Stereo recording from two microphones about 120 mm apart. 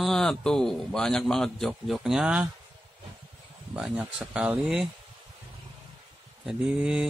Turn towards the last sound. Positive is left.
turn(degrees=-5)  # may be behind; listen again after turning